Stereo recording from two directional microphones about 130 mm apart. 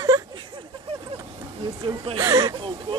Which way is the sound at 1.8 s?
45° right (ahead or behind).